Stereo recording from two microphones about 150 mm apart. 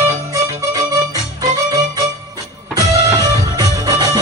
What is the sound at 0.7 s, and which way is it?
Music, 25° right (ahead or behind).